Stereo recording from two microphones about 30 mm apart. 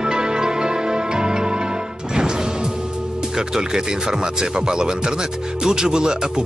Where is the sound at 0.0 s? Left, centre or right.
Right.